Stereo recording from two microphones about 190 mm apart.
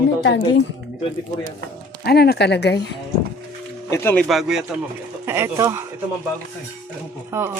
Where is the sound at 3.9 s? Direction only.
10° left (ahead or behind).